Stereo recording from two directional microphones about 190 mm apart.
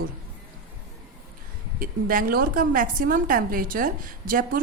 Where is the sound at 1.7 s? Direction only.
45° right (ahead or behind).